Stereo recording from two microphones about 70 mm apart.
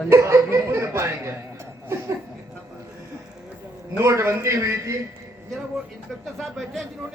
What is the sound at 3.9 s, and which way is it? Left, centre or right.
A man's voice, right.